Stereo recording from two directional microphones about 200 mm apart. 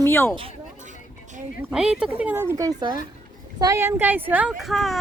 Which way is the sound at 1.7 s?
5° right (ahead or behind).